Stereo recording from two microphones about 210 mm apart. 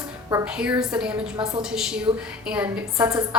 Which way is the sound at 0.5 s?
5° right (ahead or behind).